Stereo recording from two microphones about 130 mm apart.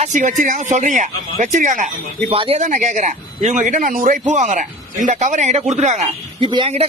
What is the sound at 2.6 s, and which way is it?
A man's voice, 70° right (ahead or behind).